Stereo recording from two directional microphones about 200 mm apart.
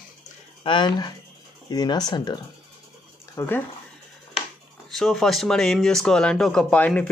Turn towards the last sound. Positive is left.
turn(degrees=5)  # may be behind; listen again after turning